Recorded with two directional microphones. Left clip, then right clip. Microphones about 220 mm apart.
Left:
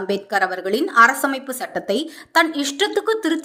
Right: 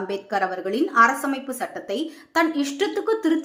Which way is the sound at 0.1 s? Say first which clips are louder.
Left 5 dB; 35° left (ahead or behind).